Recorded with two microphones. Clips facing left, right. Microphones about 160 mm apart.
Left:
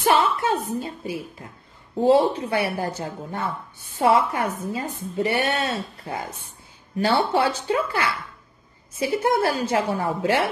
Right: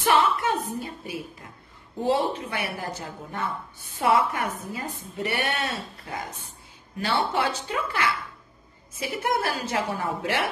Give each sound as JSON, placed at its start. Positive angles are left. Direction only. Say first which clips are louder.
{"t": 0.0, "sound": "a sound", "louder": "left 2 dB", "side_deg": 25}
{"t": 2.0, "sound": "a woman's voice", "louder": "left 7 dB", "side_deg": 30}
{"t": 9.0, "sound": "a woman's voice", "louder": "left 6 dB", "side_deg": 25}